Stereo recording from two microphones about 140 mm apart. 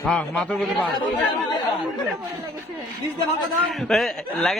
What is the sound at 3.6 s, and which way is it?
Speech, centre (ahead or behind).